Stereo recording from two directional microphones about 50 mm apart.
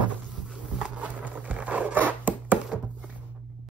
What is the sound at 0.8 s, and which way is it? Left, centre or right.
Zipper, right.